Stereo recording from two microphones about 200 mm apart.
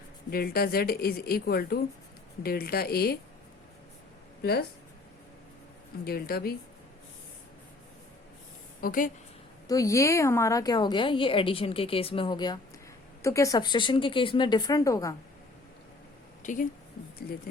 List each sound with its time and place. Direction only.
0.3 s a woman's voice: 50° left (ahead or behind)
4.4 s a woman's voice: 50° left (ahead or behind)
6.1 s a woman's voice: 50° left (ahead or behind)
8.8 s a woman's voice: 45° left (ahead or behind)
9.6 s a woman's voice: 15° left (ahead or behind)
16.4 s speech: 40° left (ahead or behind)